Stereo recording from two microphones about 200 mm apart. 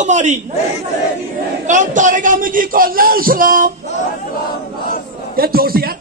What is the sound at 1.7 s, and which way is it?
A man's voice, 40° right (ahead or behind).